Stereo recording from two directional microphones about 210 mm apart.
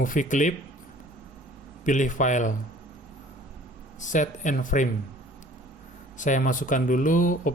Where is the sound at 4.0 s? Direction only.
35° left (ahead or behind).